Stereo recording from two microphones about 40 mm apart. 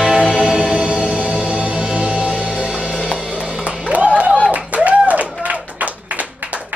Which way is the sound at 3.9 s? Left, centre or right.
Right.